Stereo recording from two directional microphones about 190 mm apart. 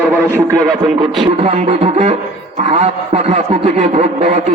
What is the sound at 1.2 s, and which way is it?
A man's voice, 35° right (ahead or behind).